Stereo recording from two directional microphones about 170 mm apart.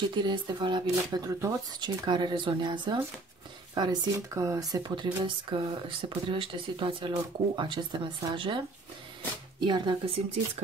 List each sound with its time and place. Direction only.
0.1 s speech: 25° right (ahead or behind)